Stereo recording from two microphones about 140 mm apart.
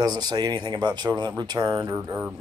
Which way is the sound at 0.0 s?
30° right (ahead or behind).